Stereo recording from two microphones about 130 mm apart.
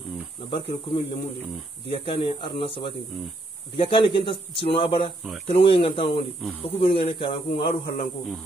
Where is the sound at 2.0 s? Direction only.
45° left (ahead or behind).